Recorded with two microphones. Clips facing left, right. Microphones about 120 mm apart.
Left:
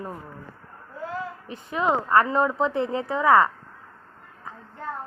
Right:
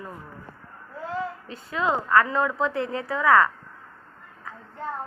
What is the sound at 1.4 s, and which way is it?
Speech, 20° left (ahead or behind).